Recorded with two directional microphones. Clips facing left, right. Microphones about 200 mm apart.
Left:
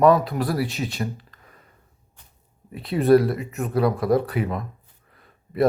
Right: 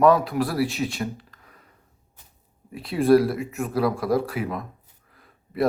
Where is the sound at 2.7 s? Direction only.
Centre (ahead or behind).